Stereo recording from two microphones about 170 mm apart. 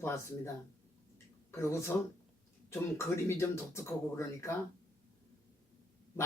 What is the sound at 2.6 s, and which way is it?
Speech, 15° left (ahead or behind).